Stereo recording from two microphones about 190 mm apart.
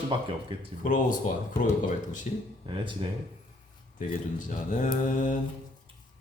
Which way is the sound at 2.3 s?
40° left (ahead or behind).